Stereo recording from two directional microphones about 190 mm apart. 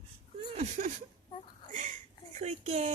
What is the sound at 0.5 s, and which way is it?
Speech, 35° right (ahead or behind).